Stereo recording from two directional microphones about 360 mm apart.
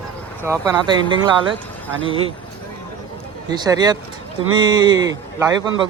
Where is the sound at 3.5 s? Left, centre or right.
Centre.